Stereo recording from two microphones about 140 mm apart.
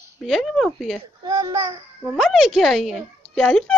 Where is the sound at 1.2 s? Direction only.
25° right (ahead or behind).